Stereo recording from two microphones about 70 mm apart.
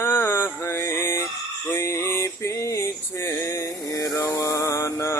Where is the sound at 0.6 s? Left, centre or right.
Left.